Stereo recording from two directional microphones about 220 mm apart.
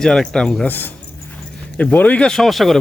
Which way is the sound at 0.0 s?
5° left (ahead or behind).